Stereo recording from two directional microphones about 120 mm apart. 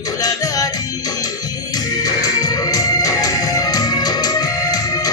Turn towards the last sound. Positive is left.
turn(degrees=30)  # may be behind; listen again after turning